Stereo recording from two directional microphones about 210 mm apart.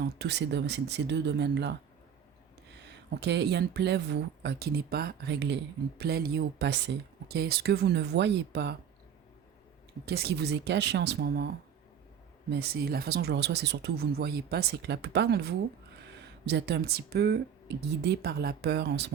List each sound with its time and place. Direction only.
0.0 s speech: 55° right (ahead or behind)
2.8 s speech: 55° right (ahead or behind)
10.1 s speech: 50° right (ahead or behind)